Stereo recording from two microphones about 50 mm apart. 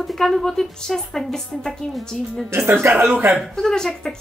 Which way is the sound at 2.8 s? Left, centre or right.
Right.